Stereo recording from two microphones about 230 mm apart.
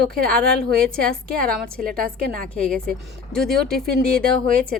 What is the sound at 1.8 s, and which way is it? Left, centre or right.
Speech, right.